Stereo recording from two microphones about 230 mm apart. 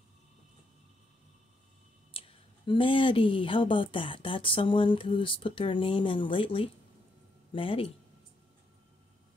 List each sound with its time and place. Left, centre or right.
2.1 s speech: left